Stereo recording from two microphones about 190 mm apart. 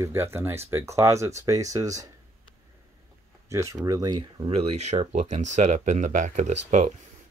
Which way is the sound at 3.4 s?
15° right (ahead or behind).